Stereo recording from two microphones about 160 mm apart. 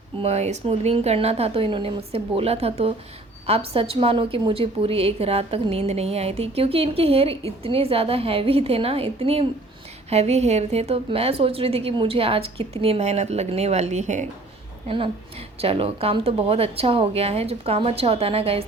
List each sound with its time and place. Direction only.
0.2 s a woman's voice: 45° right (ahead or behind)
14.8 s a woman's voice: 35° right (ahead or behind)